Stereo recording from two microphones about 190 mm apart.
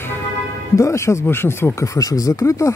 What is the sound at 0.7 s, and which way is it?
Speech, 15° left (ahead or behind).